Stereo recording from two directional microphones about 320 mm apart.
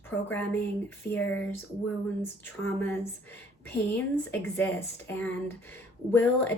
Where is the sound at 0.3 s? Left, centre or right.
Centre.